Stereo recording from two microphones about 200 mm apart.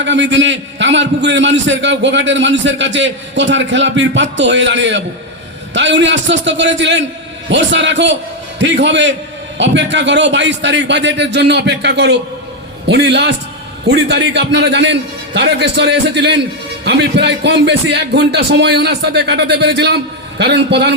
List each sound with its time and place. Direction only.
0.0 s a man's voice: 65° right (ahead or behind)